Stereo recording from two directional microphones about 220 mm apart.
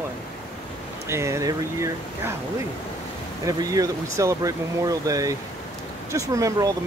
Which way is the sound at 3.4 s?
15° right (ahead or behind).